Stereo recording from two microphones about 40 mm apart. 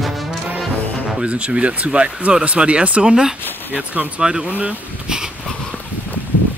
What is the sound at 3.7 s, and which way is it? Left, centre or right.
Speech, right.